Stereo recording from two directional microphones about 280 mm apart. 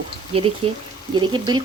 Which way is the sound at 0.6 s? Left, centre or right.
Right.